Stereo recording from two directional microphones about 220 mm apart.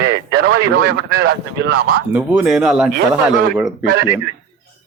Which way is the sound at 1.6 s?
50° right (ahead or behind).